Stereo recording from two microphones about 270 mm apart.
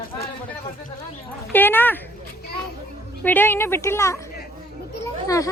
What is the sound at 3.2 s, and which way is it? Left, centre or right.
A woman's voice, centre.